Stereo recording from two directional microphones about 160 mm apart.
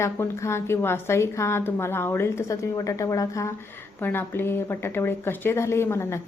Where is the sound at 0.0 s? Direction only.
15° left (ahead or behind).